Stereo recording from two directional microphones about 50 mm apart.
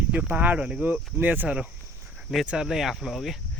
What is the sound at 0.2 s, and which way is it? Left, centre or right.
Speech, right.